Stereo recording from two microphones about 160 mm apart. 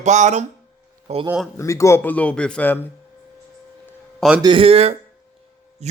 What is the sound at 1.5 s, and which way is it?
Speech, 20° left (ahead or behind).